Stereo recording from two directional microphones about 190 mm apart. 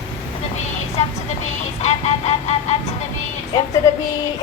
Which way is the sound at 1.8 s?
35° left (ahead or behind).